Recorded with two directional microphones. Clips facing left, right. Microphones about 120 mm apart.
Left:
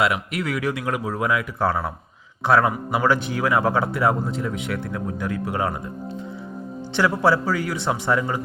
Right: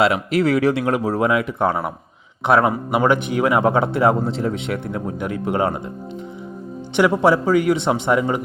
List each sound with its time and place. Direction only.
0.0 s a man's voice: 30° right (ahead or behind)
7.2 s a man's voice: 20° right (ahead or behind)